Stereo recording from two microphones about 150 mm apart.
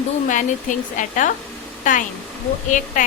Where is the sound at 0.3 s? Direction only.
60° left (ahead or behind).